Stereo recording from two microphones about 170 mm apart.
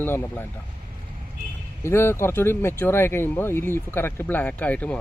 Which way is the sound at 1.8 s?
15° left (ahead or behind).